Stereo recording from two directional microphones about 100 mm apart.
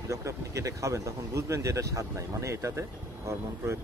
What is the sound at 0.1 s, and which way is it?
Speech, 30° right (ahead or behind).